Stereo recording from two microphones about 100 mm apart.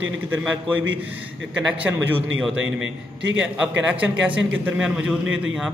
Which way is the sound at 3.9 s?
10° right (ahead or behind).